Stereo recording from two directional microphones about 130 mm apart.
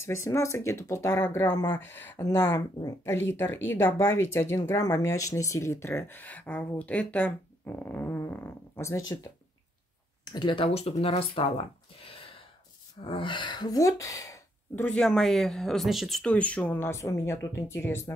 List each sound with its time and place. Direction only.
0.0 s speech: 20° left (ahead or behind)
2.2 s speech: 30° left (ahead or behind)
10.2 s speech: 35° left (ahead or behind)
14.9 s speech: 5° left (ahead or behind); by 18.1 s 20° left (ahead or behind)